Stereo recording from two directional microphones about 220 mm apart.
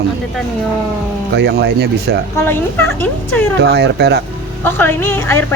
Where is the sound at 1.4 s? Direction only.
50° right (ahead or behind).